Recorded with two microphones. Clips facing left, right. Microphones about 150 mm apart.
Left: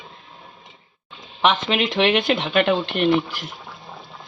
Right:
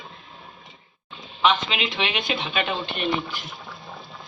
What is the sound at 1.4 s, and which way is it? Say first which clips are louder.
Speech: left 3 dB; 55° left (ahead or behind).